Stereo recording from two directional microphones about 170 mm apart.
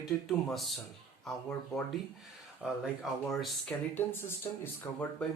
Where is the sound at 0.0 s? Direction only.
Centre (ahead or behind).